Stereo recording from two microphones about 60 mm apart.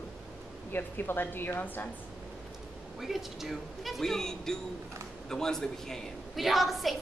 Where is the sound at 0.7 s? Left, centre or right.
Left.